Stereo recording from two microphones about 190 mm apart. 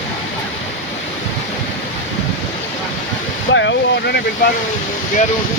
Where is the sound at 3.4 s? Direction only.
75° left (ahead or behind).